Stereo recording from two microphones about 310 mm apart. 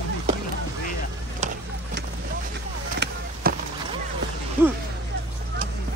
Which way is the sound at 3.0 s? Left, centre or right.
Right.